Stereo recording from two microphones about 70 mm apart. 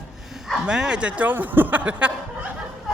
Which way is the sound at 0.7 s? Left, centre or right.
Centre.